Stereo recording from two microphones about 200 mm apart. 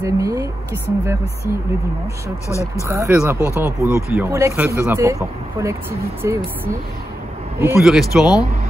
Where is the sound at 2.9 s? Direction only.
10° right (ahead or behind).